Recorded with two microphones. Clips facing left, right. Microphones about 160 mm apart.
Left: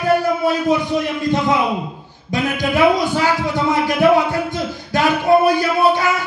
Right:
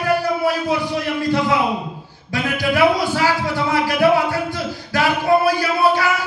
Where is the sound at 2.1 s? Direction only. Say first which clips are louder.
Left 3 dB; 20° left (ahead or behind).